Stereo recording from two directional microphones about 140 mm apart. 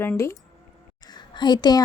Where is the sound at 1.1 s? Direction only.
30° left (ahead or behind).